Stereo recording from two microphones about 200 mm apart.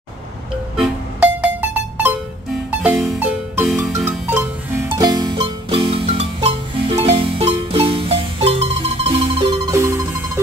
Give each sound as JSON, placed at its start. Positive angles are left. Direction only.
{"t": 0.7, "sound": "music", "side_deg": -5}
{"t": 4.8, "sound": "music", "side_deg": -20}